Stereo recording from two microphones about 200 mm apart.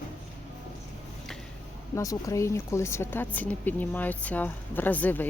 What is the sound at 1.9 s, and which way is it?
Speech, 15° left (ahead or behind).